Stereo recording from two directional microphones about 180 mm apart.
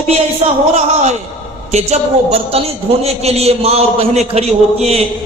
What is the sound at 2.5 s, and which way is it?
A man's voice, 35° right (ahead or behind).